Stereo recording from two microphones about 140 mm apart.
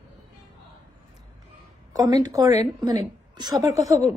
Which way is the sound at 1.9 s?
25° right (ahead or behind).